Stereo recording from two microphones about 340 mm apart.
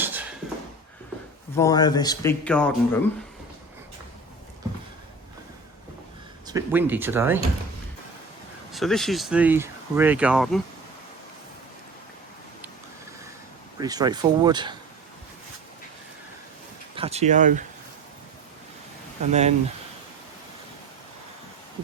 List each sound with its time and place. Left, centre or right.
0.0 s a sound: centre
1.5 s speech: centre
6.5 s speech: centre
8.7 s speech: centre
13.7 s speech: centre
16.9 s speech: centre
19.3 s speech: centre